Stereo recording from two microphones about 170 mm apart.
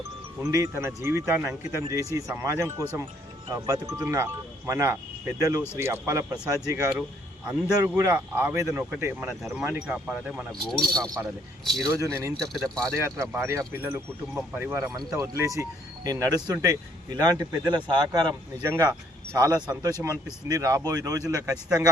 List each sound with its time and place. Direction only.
0.3 s speech: 20° right (ahead or behind)
10.5 s speech: 5° left (ahead or behind)
11.9 s speech: 15° right (ahead or behind)
12.4 s speech: centre (ahead or behind)
13.0 s speech: 15° right (ahead or behind)